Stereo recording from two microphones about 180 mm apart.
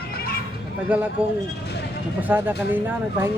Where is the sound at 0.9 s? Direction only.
10° right (ahead or behind).